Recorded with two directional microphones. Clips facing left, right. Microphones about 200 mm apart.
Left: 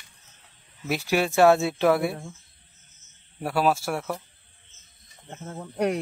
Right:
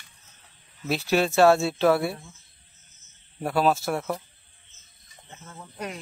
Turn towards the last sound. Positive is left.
turn(degrees=60)  # may be behind; listen again after turning